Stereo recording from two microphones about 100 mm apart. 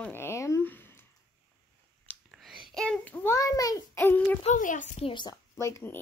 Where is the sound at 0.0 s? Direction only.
25° left (ahead or behind).